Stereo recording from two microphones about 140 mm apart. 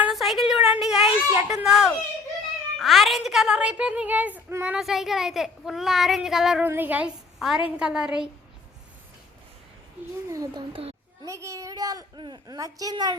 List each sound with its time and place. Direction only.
0.0 s a sound: centre (ahead or behind)
1.4 s a woman's voice: 5° right (ahead or behind)
6.7 s a woman's voice: 15° right (ahead or behind)
10.2 s a child's voice: 25° right (ahead or behind)
10.7 s a child's voice: 40° right (ahead or behind)
11.3 s a child's voice: 20° right (ahead or behind)